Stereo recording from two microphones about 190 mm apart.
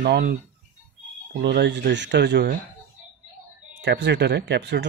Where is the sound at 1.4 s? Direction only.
65° right (ahead or behind).